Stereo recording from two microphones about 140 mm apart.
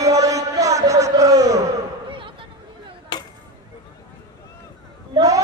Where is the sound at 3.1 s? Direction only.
35° left (ahead or behind).